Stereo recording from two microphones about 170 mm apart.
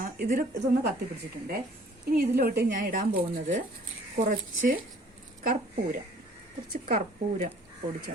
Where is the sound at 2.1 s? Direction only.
65° right (ahead or behind).